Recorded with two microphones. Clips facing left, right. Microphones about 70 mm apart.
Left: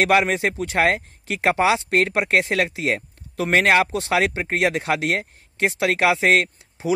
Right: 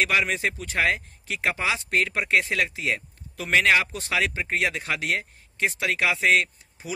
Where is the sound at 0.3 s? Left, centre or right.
Left.